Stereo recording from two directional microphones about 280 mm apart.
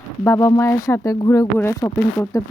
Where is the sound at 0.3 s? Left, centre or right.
Centre.